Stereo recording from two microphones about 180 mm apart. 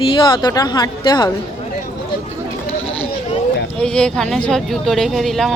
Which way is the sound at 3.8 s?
5° left (ahead or behind).